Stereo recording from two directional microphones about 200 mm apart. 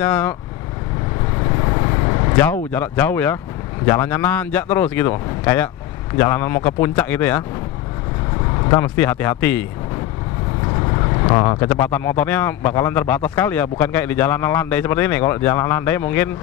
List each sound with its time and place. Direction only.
0.0 s speech: 10° left (ahead or behind)
1.6 s vehicle: 20° left (ahead or behind)
2.7 s speech: 10° left (ahead or behind)
8.7 s speech: 10° left (ahead or behind)
10.9 s speech: 25° left (ahead or behind)